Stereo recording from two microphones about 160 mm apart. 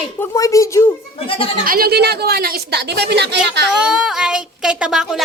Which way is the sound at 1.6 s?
65° right (ahead or behind).